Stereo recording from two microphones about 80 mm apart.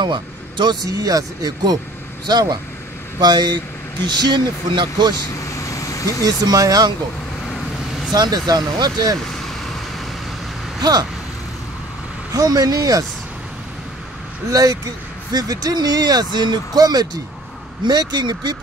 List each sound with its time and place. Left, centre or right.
0.0 s speech: right
0.8 s speech: right
5.1 s vehicle: left
6.2 s speech: right
8.1 s speech: right
10.8 s speech: right
12.4 s speech: right
14.5 s speech: right